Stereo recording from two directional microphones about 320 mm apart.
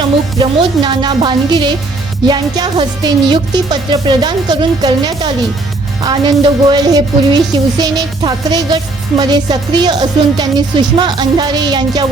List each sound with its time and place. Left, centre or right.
0.3 s a woman's voice: centre